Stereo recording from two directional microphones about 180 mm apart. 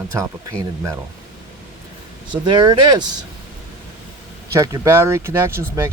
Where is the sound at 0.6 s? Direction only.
15° right (ahead or behind).